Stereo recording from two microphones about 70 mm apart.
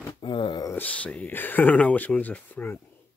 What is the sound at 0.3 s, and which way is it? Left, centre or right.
Speech, left.